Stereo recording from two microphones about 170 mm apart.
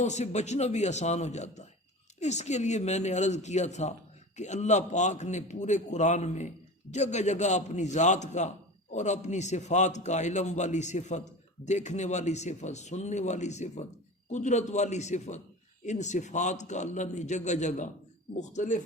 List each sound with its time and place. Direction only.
0.0 s a man's voice: 40° left (ahead or behind)